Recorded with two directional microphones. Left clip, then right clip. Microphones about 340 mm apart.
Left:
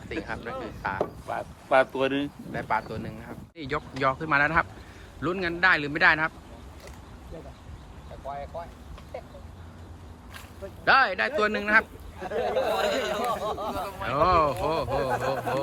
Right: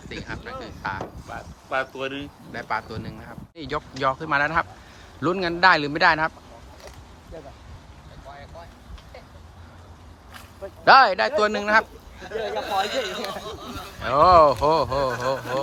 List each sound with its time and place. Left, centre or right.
0.1 s speech: centre
1.3 s speech: centre
2.5 s speech: centre
10.8 s speech: centre
12.2 s speech: centre
14.0 s speech: centre